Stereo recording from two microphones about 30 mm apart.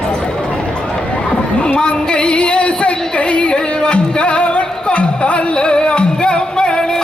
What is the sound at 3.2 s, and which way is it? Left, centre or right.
Music, left.